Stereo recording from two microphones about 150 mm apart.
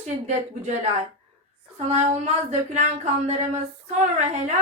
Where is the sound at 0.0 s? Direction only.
50° right (ahead or behind).